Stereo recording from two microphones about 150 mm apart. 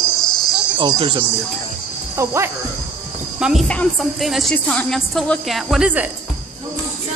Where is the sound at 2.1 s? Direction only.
20° right (ahead or behind).